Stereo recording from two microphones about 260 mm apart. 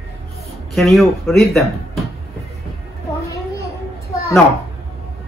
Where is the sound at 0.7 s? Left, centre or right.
Centre.